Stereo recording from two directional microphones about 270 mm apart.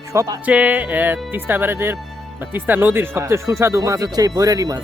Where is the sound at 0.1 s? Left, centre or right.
Centre.